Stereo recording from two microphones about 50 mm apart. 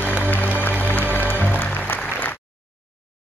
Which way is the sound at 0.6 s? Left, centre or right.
Left.